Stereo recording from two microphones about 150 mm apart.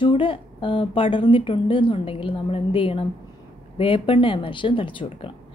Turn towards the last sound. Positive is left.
turn(degrees=35)  # may be behind; listen again after turning